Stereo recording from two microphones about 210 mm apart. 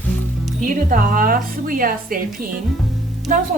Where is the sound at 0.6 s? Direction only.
40° right (ahead or behind).